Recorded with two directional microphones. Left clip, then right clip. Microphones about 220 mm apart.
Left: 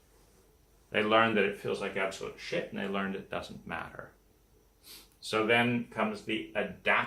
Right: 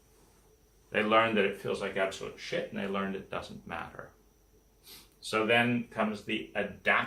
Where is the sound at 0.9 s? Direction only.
15° left (ahead or behind).